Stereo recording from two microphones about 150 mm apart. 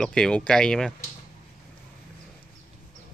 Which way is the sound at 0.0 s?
5° left (ahead or behind).